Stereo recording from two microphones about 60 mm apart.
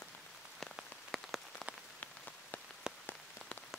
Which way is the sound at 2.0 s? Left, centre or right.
Left.